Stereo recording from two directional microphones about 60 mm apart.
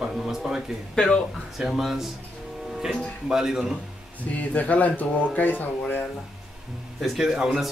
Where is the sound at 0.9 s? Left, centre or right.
Centre.